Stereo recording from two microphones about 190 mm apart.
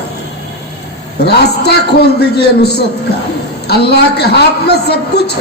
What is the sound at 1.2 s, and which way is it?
A man's voice, 60° left (ahead or behind).